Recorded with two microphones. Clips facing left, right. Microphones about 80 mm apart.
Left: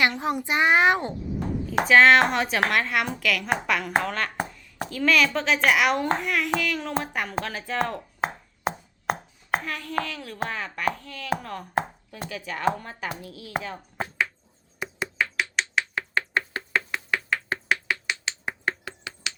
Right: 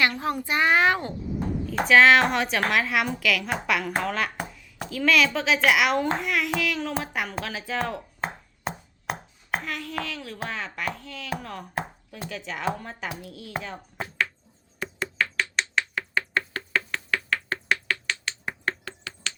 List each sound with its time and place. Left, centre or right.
0.0 s a child's voice: left
1.8 s speech: centre
14.8 s a sound: centre
15.8 s finger snapping: centre